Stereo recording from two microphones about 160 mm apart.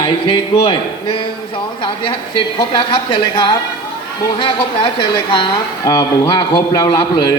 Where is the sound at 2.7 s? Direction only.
30° left (ahead or behind).